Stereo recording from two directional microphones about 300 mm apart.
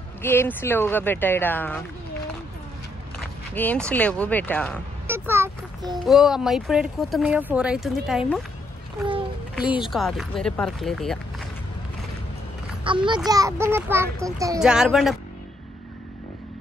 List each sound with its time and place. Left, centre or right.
0.2 s speech: centre
3.5 s speech: centre
5.0 s speech: centre
9.6 s speech: centre
12.8 s a child's voice: centre